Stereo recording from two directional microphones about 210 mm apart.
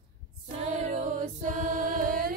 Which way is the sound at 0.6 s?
40° right (ahead or behind).